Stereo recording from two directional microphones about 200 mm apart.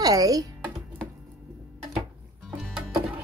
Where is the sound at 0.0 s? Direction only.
20° right (ahead or behind).